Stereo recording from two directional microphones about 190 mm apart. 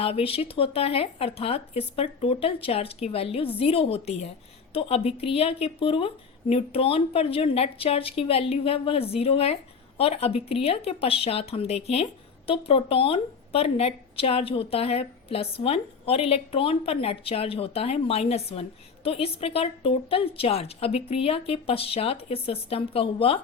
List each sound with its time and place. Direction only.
0.0 s a woman's voice: 30° left (ahead or behind)